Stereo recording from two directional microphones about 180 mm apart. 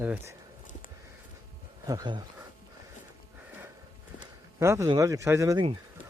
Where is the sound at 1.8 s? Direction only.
20° right (ahead or behind).